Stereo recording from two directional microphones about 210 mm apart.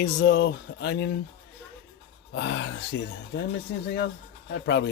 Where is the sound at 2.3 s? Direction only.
55° left (ahead or behind).